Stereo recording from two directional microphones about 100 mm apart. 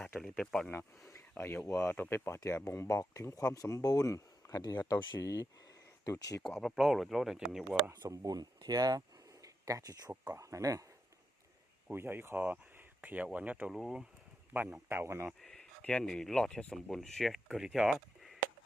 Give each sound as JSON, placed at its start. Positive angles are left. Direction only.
{"t": 0.2, "sound": "speech", "side_deg": 5}
{"t": 1.8, "sound": "speech", "side_deg": 20}
{"t": 6.4, "sound": "speech", "side_deg": 5}
{"t": 8.0, "sound": "speech", "side_deg": -40}
{"t": 11.9, "sound": "speech", "side_deg": -20}
{"t": 13.7, "sound": "speech", "side_deg": -5}
{"t": 14.5, "sound": "speech", "side_deg": -30}
{"t": 15.3, "sound": "speech", "side_deg": 5}